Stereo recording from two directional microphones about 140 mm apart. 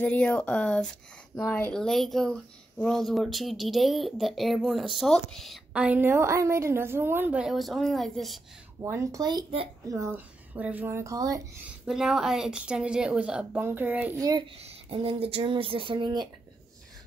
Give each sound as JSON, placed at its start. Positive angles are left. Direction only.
{"t": 0.0, "sound": "speech", "side_deg": 10}
{"t": 8.8, "sound": "speech", "side_deg": -20}
{"t": 11.8, "sound": "speech", "side_deg": -5}
{"t": 14.6, "sound": "speech", "side_deg": -40}